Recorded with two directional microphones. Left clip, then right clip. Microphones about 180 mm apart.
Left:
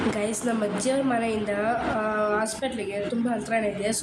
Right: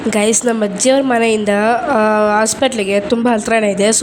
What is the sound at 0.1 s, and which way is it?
A woman's voice, 55° right (ahead or behind).